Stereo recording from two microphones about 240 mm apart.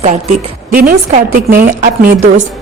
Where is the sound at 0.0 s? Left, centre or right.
Right.